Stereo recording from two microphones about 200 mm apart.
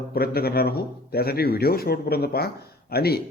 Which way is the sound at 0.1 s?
50° left (ahead or behind).